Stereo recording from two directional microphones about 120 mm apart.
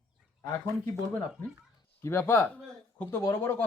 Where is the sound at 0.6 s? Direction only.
20° left (ahead or behind).